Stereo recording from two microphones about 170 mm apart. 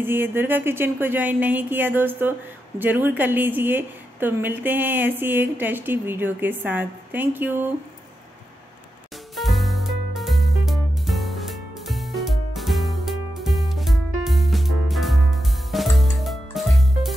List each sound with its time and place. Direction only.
0.0 s a woman's voice: 15° right (ahead or behind)
9.3 s music: centre (ahead or behind)